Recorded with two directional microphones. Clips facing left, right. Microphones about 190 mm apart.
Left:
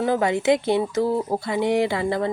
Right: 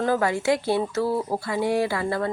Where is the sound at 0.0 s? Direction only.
20° left (ahead or behind).